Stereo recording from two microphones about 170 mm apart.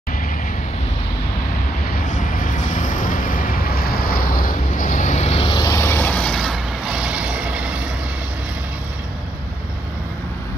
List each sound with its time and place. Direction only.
2.0 s vehicle: 50° left (ahead or behind); by 7.7 s 5° right (ahead or behind)